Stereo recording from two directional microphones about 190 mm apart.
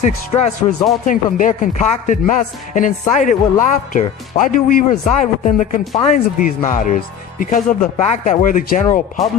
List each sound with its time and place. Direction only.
0.0 s a man's voice: 35° left (ahead or behind)